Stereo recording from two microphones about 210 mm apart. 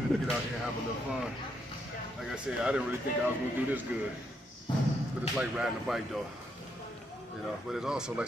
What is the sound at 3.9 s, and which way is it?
Speech, 5° right (ahead or behind).